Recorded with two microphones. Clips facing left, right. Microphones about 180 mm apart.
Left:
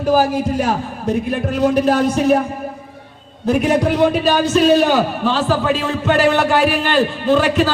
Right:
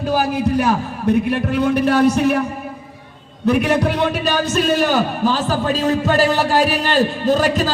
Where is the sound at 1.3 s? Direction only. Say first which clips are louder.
Left 1 dB; 60° right (ahead or behind).